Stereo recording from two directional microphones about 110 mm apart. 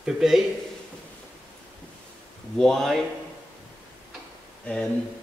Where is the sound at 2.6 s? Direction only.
5° left (ahead or behind).